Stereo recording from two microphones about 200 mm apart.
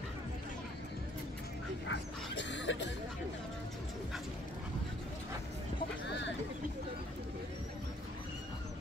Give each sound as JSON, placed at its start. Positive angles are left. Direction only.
{"t": 1.9, "sound": "dog", "side_deg": 65}